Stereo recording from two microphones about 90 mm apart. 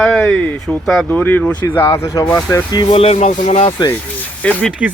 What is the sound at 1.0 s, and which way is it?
Speech, 20° left (ahead or behind).